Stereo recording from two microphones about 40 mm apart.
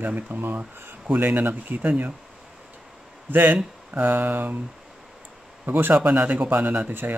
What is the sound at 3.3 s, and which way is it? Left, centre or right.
Speech, right.